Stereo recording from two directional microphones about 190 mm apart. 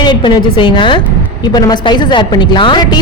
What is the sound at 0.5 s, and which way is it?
A woman's voice, 25° left (ahead or behind).